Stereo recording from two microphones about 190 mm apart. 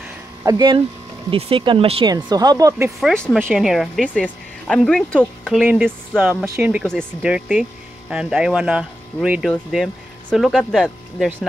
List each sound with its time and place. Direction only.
0.5 s speech: 25° right (ahead or behind)
3.0 s speech: 5° left (ahead or behind)
6.8 s speech: centre (ahead or behind)